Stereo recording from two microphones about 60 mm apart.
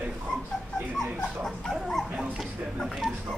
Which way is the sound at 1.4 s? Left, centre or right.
Centre.